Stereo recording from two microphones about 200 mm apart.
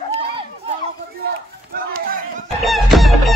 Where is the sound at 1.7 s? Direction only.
45° right (ahead or behind).